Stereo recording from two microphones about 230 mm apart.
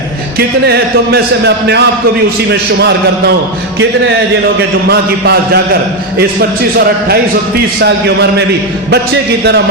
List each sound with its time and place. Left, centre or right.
0.3 s speech: right
4.9 s speech: right
7.8 s speech: right